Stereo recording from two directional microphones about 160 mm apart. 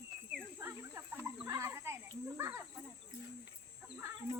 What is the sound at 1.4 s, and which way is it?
Snake, 20° right (ahead or behind).